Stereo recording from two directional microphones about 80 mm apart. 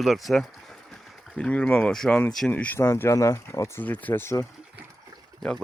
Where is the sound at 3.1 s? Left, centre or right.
Left.